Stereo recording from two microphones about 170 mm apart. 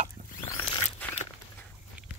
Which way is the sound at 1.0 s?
10° left (ahead or behind).